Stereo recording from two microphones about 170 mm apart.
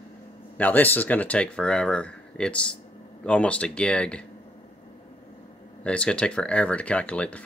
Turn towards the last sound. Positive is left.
turn(degrees=5)  # may be behind; listen again after turning